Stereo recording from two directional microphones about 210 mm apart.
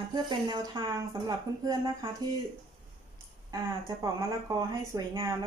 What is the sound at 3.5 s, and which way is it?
A woman's voice, 15° right (ahead or behind).